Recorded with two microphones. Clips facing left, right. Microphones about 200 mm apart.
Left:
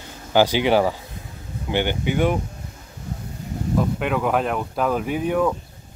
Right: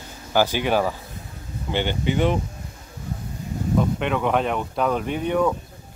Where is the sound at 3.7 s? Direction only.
5° left (ahead or behind).